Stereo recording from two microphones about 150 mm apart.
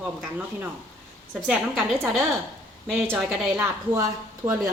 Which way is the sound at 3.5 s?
15° right (ahead or behind).